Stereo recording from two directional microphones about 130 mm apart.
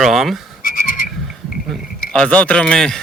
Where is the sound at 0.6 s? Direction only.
90° left.